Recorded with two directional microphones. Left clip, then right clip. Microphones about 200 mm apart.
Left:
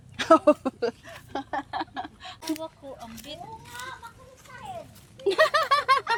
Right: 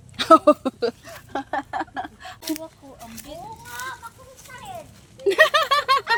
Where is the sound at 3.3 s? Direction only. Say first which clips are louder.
Right 4 dB; 35° left (ahead or behind).